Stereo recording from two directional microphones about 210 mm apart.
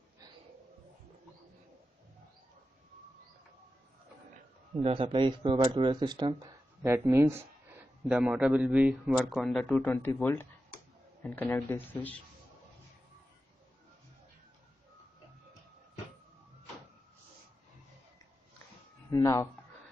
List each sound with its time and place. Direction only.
4.7 s a man's voice: 25° right (ahead or behind); by 12.2 s 10° left (ahead or behind)
19.0 s speech: 15° left (ahead or behind)